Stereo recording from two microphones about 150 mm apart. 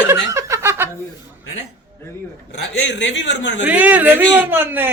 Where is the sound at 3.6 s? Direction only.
10° right (ahead or behind).